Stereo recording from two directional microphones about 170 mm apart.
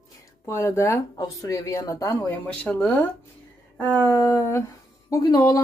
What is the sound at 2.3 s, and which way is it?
Speech, 10° left (ahead or behind).